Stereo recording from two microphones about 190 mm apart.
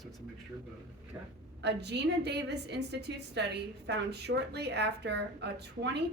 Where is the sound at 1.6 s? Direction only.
60° right (ahead or behind).